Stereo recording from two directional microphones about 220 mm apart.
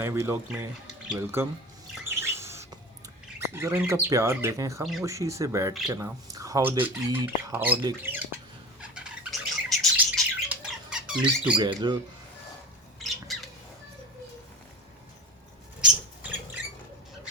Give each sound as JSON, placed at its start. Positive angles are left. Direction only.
{"t": 0.0, "sound": "speech", "side_deg": -10}
{"t": 2.0, "sound": "bird", "side_deg": -10}
{"t": 3.5, "sound": "speech", "side_deg": -10}
{"t": 4.8, "sound": "speech", "side_deg": 0}
{"t": 5.0, "sound": "speech", "side_deg": -15}
{"t": 8.8, "sound": "bird", "side_deg": -5}
{"t": 11.5, "sound": "speech", "side_deg": -20}
{"t": 13.0, "sound": "bird", "side_deg": 0}